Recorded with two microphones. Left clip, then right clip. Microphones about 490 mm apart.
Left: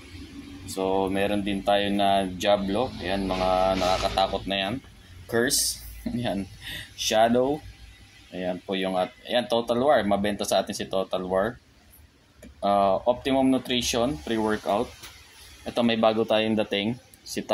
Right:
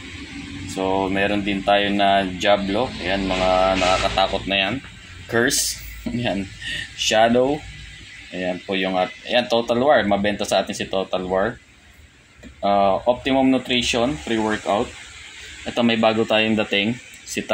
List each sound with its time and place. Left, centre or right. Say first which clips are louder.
0.7 s speech: right 4 dB; left
12.6 s speech: right 4 dB; left